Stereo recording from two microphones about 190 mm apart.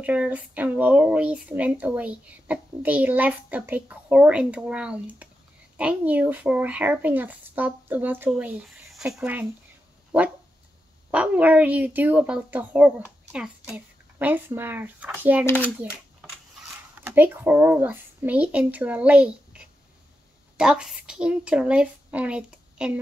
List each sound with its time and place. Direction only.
0.0 s speech: 10° right (ahead or behind)
15.4 s a child's voice: 10° left (ahead or behind)
17.0 s speech: 10° right (ahead or behind)